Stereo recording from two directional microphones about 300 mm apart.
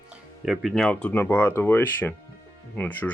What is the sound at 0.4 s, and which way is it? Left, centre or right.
Speech, centre.